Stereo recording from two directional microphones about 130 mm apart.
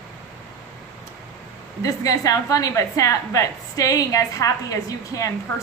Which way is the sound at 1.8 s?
25° left (ahead or behind).